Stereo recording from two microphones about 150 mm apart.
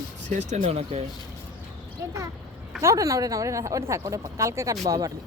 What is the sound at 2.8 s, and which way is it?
Speech, 20° right (ahead or behind).